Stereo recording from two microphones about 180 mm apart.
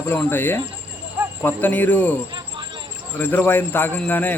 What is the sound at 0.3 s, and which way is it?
Speech, 10° left (ahead or behind).